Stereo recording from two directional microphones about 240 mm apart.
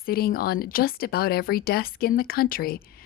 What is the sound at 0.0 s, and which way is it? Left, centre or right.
Speech, left.